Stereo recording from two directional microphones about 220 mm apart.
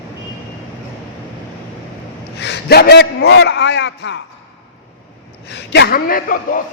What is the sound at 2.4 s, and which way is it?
A man's voice, 50° left (ahead or behind).